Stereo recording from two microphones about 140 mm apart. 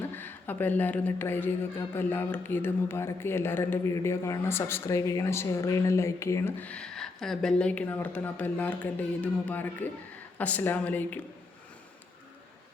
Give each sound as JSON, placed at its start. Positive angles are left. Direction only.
{"t": 0.0, "sound": "speech", "side_deg": 15}